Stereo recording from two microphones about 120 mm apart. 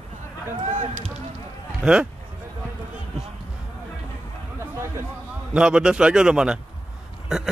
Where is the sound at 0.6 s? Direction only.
70° right (ahead or behind).